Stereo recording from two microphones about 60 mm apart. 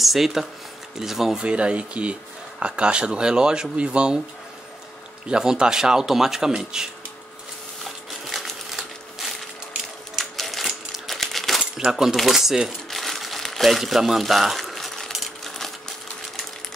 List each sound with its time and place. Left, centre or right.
0.0 s speech: centre
1.4 s speech: centre
5.3 s speech: centre
7.8 s a sound: centre
10.1 s typewriter: centre
11.7 s speech: centre
12.2 s crumpling: centre
13.7 s a sound: centre